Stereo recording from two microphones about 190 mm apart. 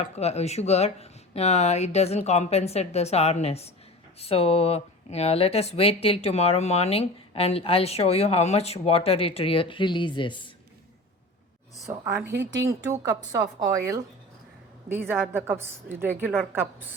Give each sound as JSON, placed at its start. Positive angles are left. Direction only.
{"t": 0.0, "sound": "speech", "side_deg": 35}
{"t": 11.9, "sound": "a woman's voice", "side_deg": -15}
{"t": 12.3, "sound": "a woman's voice", "side_deg": -65}
{"t": 13.0, "sound": "a woman's voice", "side_deg": -20}